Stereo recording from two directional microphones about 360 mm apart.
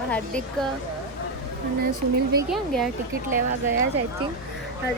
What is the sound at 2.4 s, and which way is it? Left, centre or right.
Speech, centre.